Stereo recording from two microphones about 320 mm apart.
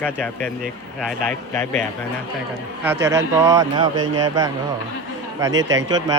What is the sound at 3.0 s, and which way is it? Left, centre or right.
Speech, centre.